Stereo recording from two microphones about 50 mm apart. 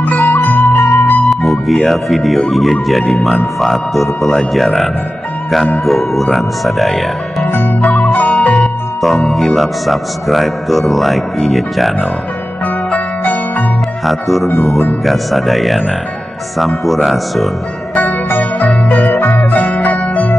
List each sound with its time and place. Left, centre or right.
0.0 s music: left
1.3 s speech: centre
5.9 s speech: centre
7.5 s music: left
9.3 s speech: centre
12.9 s music: left
14.0 s speech: centre
17.9 s music: left